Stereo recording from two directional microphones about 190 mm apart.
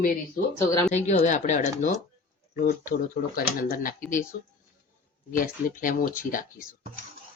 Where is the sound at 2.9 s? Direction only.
50° left (ahead or behind).